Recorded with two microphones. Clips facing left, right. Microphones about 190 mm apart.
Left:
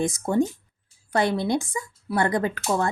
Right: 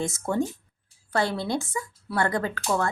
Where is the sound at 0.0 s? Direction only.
15° left (ahead or behind).